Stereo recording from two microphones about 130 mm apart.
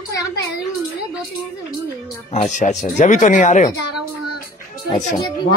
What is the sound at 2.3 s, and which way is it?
Speech, 70° left (ahead or behind).